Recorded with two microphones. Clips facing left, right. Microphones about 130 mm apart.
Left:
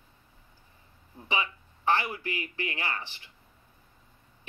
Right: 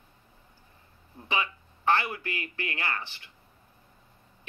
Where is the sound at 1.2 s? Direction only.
15° left (ahead or behind).